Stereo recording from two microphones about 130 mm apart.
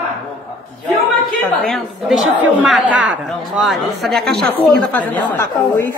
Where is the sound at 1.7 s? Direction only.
Centre (ahead or behind).